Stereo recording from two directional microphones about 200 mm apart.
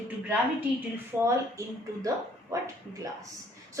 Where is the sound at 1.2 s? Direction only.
15° right (ahead or behind).